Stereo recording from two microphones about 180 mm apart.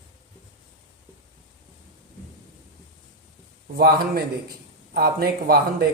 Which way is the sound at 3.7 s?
60° right (ahead or behind).